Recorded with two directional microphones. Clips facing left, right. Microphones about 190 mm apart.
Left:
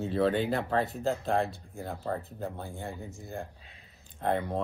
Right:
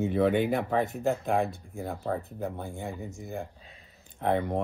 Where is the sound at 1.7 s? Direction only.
Centre (ahead or behind).